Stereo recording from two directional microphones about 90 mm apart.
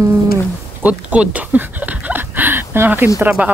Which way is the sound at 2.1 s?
20° right (ahead or behind).